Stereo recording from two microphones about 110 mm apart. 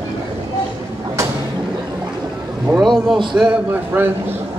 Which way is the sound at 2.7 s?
25° right (ahead or behind).